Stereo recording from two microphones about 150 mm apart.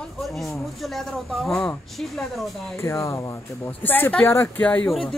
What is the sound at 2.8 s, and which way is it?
Speech, 20° left (ahead or behind).